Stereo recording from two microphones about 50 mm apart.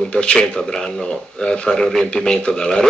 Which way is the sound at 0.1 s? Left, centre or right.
Centre.